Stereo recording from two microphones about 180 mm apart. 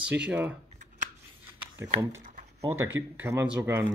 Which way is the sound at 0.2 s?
10° right (ahead or behind).